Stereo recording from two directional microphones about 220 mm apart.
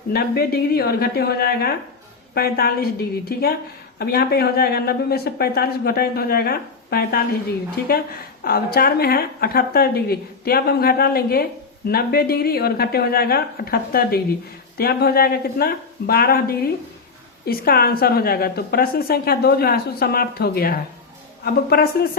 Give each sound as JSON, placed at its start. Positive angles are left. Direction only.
{"t": 0.1, "sound": "speech", "side_deg": 45}